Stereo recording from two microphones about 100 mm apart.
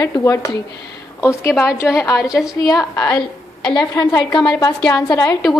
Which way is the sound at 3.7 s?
50° left (ahead or behind).